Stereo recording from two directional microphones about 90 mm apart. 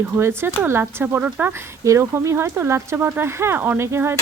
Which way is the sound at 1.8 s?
35° right (ahead or behind).